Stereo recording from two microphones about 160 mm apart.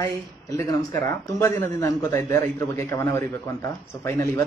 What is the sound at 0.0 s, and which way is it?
A man's voice, 20° left (ahead or behind).